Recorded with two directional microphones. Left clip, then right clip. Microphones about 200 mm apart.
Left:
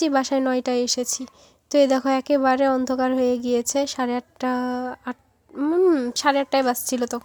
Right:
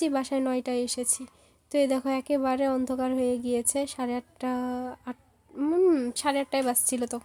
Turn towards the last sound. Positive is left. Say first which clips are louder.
# left 5 dB
turn(degrees=15)  # may be behind; listen again after turning